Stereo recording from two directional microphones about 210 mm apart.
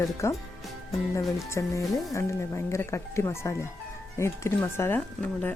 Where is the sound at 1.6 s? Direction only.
15° left (ahead or behind).